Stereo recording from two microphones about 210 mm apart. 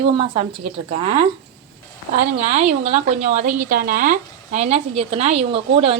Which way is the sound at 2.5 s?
30° right (ahead or behind).